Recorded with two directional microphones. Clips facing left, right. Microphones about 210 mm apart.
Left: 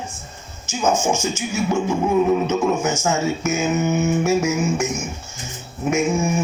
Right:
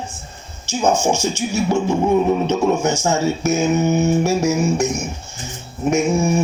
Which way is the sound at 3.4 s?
35° right (ahead or behind).